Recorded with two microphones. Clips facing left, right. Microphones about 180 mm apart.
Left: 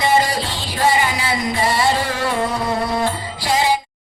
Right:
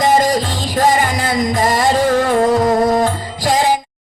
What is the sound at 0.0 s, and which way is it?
Music, 45° right (ahead or behind).